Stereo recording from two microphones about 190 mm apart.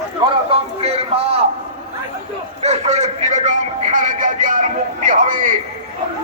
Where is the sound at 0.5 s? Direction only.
30° right (ahead or behind).